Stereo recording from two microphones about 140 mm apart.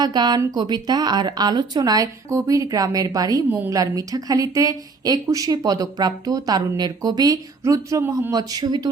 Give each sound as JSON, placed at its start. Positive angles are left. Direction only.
{"t": 0.0, "sound": "a woman's voice", "side_deg": -30}